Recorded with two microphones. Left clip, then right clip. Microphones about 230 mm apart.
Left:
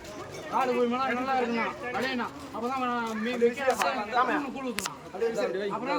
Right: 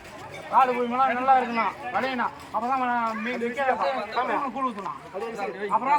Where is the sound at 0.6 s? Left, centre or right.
Centre.